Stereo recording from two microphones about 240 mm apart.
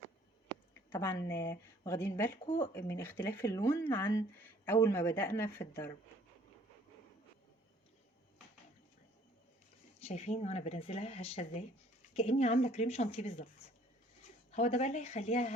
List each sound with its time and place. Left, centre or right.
0.7 s a sound: centre
1.3 s speech: centre
10.0 s speech: left
14.5 s speech: left